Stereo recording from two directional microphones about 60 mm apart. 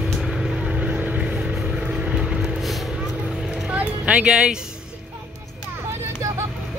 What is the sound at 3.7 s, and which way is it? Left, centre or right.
Music, right.